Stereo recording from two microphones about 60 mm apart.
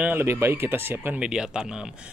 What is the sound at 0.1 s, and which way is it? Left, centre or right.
Speech, right.